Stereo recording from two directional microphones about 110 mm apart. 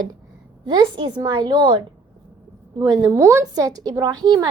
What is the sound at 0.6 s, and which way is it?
A woman's voice, 45° right (ahead or behind).